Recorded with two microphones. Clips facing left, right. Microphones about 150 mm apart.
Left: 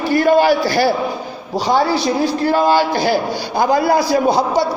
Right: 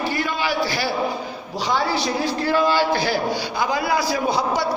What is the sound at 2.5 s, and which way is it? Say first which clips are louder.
A man's voice: left 3 dB; 45° left (ahead or behind).